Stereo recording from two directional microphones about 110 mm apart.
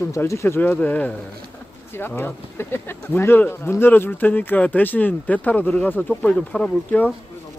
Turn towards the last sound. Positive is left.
turn(degrees=10)  # may be behind; listen again after turning